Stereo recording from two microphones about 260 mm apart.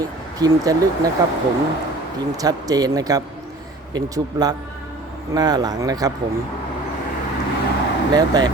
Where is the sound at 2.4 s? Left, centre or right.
Centre.